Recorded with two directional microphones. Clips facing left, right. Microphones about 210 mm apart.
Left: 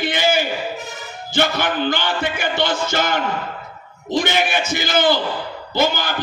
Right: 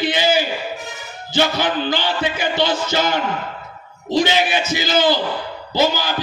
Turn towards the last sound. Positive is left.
turn(degrees=55)  # may be behind; listen again after turning